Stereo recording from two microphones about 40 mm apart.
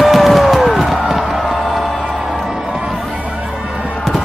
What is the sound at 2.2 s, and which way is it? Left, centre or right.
Music, centre.